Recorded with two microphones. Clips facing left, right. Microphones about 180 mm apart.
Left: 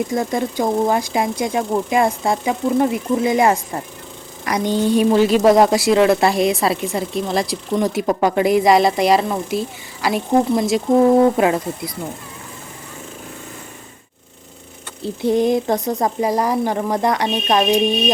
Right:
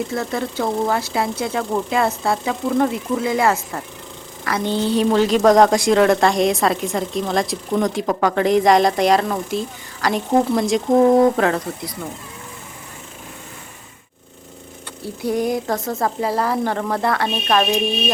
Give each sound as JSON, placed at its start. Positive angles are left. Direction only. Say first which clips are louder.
{"t": 0.1, "sound": "a woman's voice", "louder": "left 3 dB", "side_deg": 15}
{"t": 15.0, "sound": "speech", "louder": "left 4 dB", "side_deg": 25}